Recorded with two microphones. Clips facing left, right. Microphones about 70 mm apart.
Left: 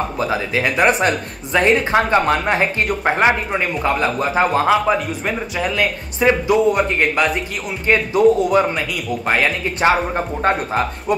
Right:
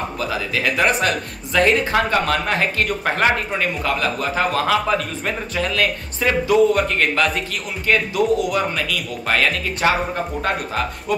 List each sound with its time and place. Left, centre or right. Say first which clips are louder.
0.2 s a man's voice: left 3 dB; left